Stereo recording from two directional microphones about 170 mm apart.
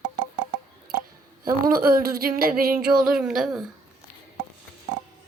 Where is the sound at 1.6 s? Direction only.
55° right (ahead or behind).